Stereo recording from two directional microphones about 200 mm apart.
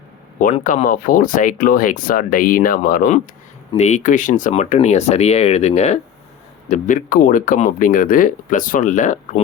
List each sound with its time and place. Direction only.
0.3 s speech: 40° left (ahead or behind)
3.7 s speech: 35° left (ahead or behind)